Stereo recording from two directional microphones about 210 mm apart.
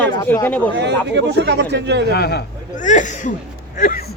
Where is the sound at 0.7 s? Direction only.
55° right (ahead or behind).